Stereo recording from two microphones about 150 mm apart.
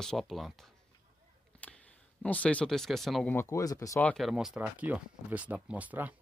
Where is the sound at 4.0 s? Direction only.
5° left (ahead or behind); by 6.1 s 10° right (ahead or behind).